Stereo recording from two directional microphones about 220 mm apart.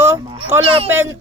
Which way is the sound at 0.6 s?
25° right (ahead or behind).